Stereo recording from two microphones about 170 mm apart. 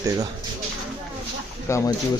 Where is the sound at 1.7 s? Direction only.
15° left (ahead or behind).